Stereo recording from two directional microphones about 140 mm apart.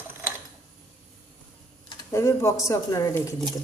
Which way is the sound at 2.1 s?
20° left (ahead or behind).